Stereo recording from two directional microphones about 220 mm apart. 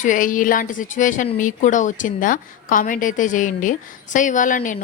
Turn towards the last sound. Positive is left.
turn(degrees=35)  # may be behind; listen again after turning